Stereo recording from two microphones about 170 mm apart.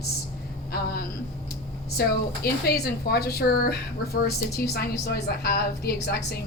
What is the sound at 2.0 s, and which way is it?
A woman's voice, 65° left (ahead or behind).